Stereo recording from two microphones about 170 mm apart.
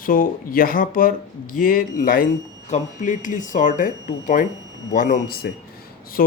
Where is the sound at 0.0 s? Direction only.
55° left (ahead or behind).